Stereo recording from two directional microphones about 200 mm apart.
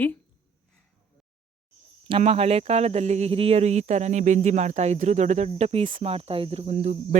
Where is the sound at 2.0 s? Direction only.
30° right (ahead or behind).